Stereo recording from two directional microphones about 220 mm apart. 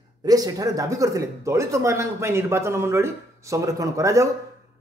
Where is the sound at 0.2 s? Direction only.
15° right (ahead or behind).